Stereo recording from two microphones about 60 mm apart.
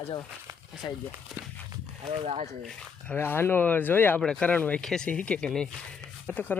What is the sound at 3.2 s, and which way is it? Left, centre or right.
Speech, left.